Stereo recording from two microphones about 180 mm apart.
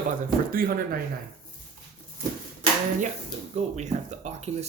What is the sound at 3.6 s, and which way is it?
Speech, 40° right (ahead or behind).